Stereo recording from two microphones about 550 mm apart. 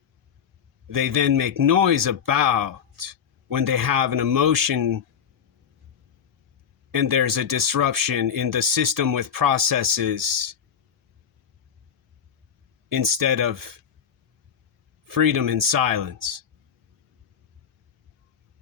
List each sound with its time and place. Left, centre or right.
0.9 s speech: right
6.9 s speech: right
12.9 s speech: right
15.0 s speech: right